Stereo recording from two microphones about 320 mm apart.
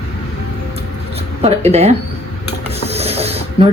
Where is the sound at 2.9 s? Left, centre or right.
Centre.